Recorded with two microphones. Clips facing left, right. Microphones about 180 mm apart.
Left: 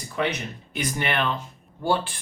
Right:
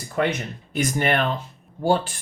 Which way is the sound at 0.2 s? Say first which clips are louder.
Right 3 dB; 45° right (ahead or behind).